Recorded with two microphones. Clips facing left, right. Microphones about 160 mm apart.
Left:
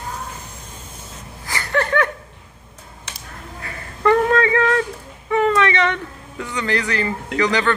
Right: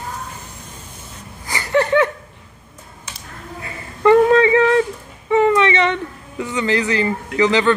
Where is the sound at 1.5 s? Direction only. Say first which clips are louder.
Right 4 dB; 15° right (ahead or behind).